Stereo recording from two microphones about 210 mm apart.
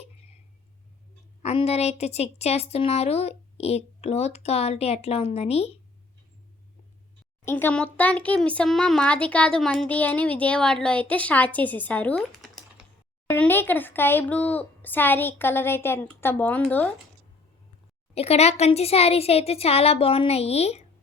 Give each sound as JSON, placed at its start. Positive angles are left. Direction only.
{"t": 1.4, "sound": "a woman's voice", "side_deg": 30}
{"t": 7.4, "sound": "a child's voice", "side_deg": 10}
{"t": 18.1, "sound": "a woman's voice", "side_deg": 30}